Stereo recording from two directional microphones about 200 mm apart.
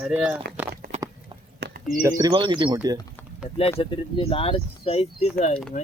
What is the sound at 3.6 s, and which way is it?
Speech, 30° left (ahead or behind).